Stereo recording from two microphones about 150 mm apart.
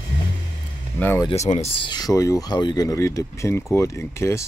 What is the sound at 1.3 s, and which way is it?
Speech, 45° left (ahead or behind).